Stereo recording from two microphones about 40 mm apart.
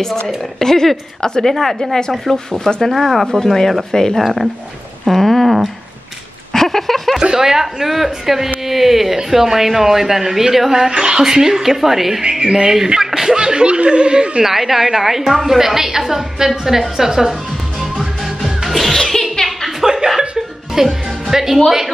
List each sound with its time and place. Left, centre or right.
0.4 s a woman's voice: centre
3.3 s a woman's voice: centre
4.2 s a woman's voice: centre
5.0 s a sound: centre
7.3 s a woman's voice: centre
12.3 s speech: centre
13.5 s snicker: right
14.4 s a woman's voice: centre
18.2 s music: centre
19.8 s music: centre
21.6 s a woman's voice: centre